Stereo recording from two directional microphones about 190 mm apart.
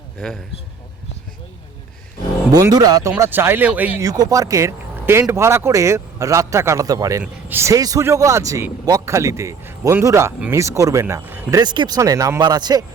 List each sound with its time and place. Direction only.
0.2 s a man's voice: centre (ahead or behind)
2.5 s speech: 20° right (ahead or behind)
11.6 s speech: 25° right (ahead or behind)